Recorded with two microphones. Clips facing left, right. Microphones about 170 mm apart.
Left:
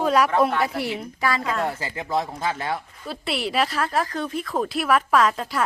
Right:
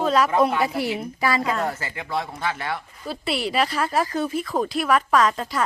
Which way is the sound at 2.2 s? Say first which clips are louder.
Left 1 dB; 30° left (ahead or behind).